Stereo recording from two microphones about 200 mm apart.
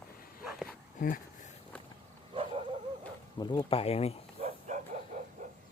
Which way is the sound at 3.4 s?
25° left (ahead or behind).